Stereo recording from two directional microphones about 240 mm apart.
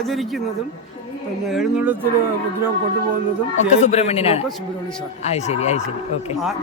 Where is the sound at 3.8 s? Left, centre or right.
Left.